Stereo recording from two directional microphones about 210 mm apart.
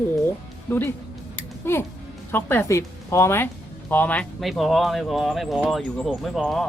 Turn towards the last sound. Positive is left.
turn(degrees=0)  # may be behind; listen again after turning